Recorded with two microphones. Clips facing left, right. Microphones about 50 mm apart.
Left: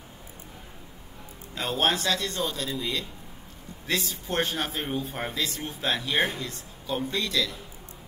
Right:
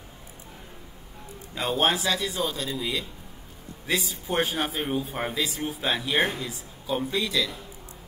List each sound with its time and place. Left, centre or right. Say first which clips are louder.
1.5 s a man's voice: right 2 dB; centre